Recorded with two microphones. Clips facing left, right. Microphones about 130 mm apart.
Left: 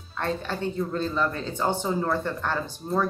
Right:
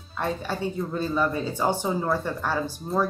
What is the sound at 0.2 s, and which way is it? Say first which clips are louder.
Speech: right 1 dB; 10° right (ahead or behind).